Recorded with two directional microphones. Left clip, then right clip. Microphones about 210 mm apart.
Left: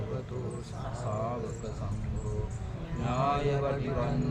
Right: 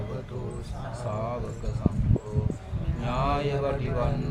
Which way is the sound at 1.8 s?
45° right (ahead or behind).